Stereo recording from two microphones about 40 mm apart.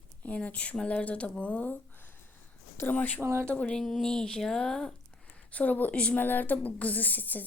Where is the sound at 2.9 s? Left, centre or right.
Left.